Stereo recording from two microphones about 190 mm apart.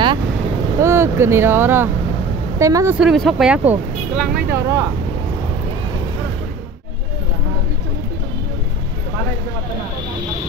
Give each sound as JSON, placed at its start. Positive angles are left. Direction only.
{"t": 0.7, "sound": "speech", "side_deg": -15}
{"t": 3.0, "sound": "speech", "side_deg": 0}